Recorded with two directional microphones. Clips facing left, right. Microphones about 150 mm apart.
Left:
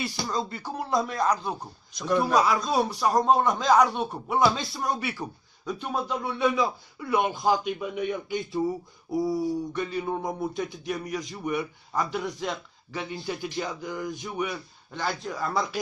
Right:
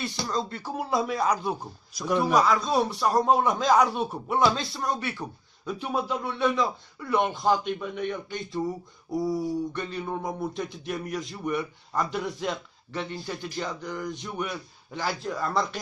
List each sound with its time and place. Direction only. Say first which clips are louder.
0.0 s speech: even; centre (ahead or behind)